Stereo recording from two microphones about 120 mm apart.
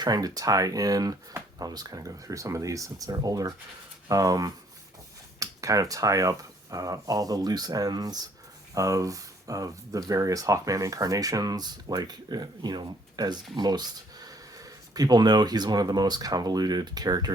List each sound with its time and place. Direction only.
0.0 s speech: 35° right (ahead or behind)